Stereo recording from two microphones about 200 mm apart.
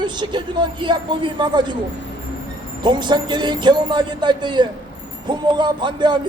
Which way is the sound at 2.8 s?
20° right (ahead or behind).